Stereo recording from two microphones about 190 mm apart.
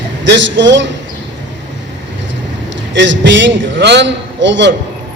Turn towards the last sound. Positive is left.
turn(degrees=-70)  # may be behind; listen again after turning